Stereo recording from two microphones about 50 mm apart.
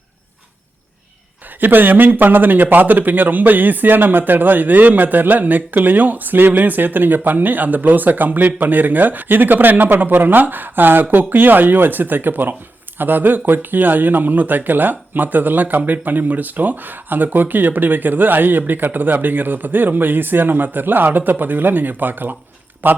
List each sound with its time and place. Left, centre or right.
1.6 s a man's voice: right